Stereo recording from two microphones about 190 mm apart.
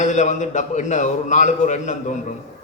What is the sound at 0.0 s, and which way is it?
A man's voice, 40° left (ahead or behind).